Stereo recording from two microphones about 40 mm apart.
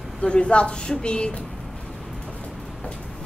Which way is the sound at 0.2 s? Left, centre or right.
Left.